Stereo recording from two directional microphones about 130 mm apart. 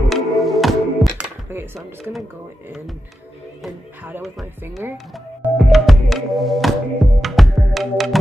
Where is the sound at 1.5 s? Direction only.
20° right (ahead or behind).